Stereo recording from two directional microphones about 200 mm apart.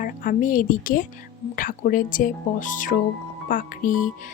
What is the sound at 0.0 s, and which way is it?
A woman's voice, 45° left (ahead or behind).